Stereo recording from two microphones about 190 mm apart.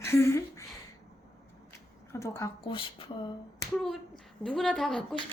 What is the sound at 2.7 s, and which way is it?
Speech, 30° left (ahead or behind).